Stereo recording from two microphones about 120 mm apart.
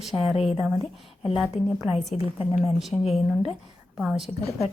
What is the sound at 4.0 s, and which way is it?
Speech, centre (ahead or behind).